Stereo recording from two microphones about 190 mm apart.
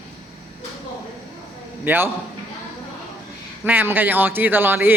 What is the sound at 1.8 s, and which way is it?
Speech, 10° right (ahead or behind).